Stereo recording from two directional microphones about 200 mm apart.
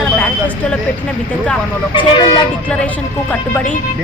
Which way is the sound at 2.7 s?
5° left (ahead or behind).